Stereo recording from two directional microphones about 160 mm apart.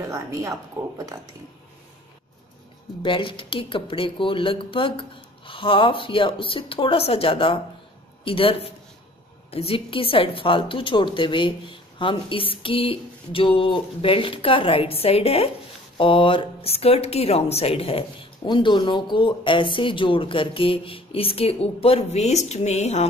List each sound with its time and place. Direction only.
0.0 s speech: 20° right (ahead or behind)
3.0 s speech: 30° left (ahead or behind)